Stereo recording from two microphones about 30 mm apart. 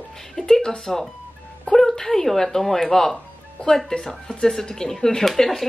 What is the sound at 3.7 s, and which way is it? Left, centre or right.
Speech, left.